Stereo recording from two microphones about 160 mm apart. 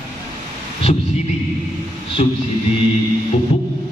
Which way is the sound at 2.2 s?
45° left (ahead or behind).